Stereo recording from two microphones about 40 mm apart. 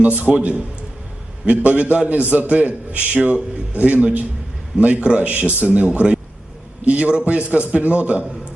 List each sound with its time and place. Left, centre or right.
0.0 s a man's voice: right
0.3 s speech: right
1.5 s a man's voice: right